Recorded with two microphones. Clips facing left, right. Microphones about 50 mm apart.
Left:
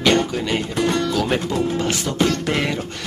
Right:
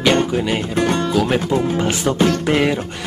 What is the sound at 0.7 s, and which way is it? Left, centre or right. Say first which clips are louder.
Speech: right 2 dB; right.